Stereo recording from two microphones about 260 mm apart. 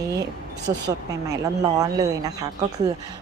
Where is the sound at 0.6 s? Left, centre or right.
Right.